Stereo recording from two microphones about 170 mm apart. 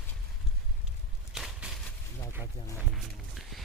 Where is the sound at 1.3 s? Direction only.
Centre (ahead or behind).